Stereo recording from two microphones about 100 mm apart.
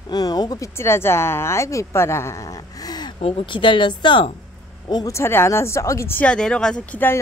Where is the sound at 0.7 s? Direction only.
25° left (ahead or behind); by 3.2 s 45° left (ahead or behind).